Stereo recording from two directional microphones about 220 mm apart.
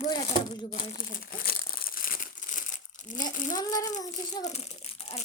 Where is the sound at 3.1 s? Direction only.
35° left (ahead or behind).